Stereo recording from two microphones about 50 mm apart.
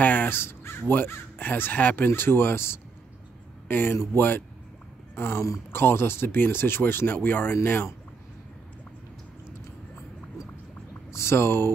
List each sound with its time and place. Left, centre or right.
0.0 s crow: left
0.3 s speech: left
2.0 s speech: left
3.6 s speech: left
3.9 s speech: left
11.1 s speech: left